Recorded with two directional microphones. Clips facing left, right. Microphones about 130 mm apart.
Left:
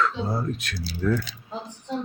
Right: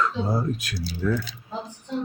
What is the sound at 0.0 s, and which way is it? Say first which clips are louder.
Speech: right 1 dB; 10° right (ahead or behind).